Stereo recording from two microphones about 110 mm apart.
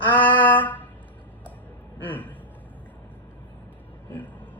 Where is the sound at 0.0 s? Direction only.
15° left (ahead or behind).